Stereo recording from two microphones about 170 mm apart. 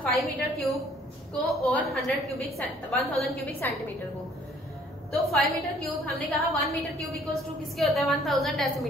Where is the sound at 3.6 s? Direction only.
10° left (ahead or behind).